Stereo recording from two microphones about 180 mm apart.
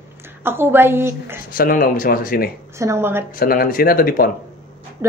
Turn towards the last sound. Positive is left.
turn(degrees=55)  # may be behind; listen again after turning